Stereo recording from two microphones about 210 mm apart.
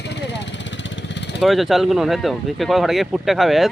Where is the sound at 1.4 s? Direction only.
Centre (ahead or behind).